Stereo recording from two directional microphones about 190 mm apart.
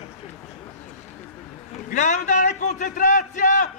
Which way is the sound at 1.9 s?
40° left (ahead or behind).